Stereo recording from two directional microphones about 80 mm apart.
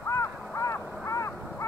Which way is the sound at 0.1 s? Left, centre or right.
Left.